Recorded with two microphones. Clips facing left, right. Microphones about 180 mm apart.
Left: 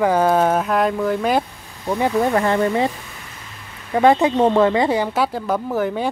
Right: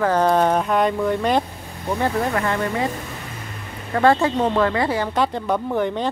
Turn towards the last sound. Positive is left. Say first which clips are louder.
# left 1 dB
turn(degrees=5)  # may be behind; listen again after turning